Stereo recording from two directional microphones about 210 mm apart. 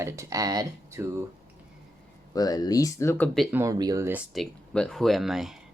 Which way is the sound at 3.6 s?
15° right (ahead or behind).